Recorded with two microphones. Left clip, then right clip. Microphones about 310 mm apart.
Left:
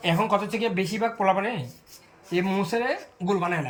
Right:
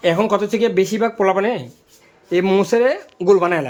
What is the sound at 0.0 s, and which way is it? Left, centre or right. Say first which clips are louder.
Speech: right 7 dB; centre.